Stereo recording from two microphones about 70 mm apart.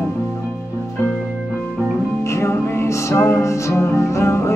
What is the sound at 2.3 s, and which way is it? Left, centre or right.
Music, left.